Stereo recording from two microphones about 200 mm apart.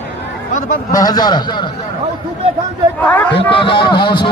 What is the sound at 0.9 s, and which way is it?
Speech, 20° left (ahead or behind).